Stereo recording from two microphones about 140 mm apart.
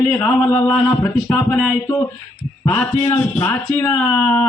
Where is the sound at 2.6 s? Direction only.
15° left (ahead or behind).